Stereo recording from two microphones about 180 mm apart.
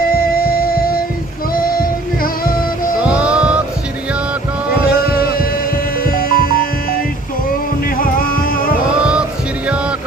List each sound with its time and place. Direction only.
0.1 s music: 55° left (ahead or behind)
3.1 s music: 5° right (ahead or behind)
4.9 s hum: 55° left (ahead or behind)
7.9 s music: 50° left (ahead or behind)